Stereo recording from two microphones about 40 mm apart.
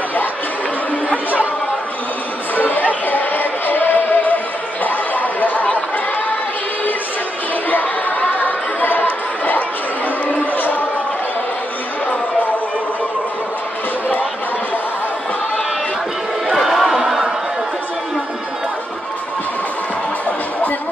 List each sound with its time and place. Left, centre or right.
2.5 s chatter: left
3.1 s music: left
4.8 s chatter: left
8.4 s chatter: left
10.3 s a sound: left
16.5 s crowd: centre